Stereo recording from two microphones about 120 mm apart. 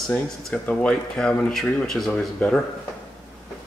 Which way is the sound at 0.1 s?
10° left (ahead or behind).